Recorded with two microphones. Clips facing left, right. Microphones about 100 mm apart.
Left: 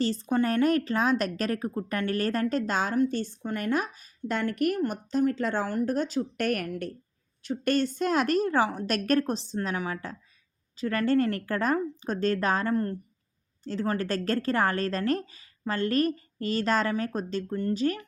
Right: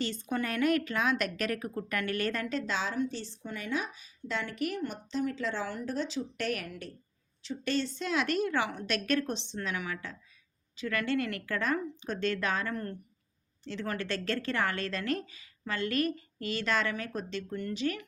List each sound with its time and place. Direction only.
0.0 s a woman's voice: 35° left (ahead or behind)